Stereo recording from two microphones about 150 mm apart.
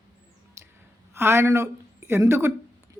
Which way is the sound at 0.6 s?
20° right (ahead or behind).